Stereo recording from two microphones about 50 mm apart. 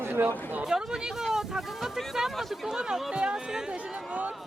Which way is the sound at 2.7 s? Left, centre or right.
Centre.